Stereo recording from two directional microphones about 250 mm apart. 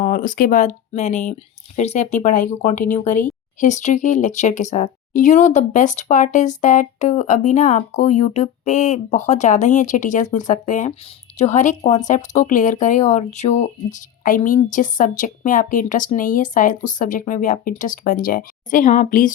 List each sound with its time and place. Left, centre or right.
0.0 s speech: left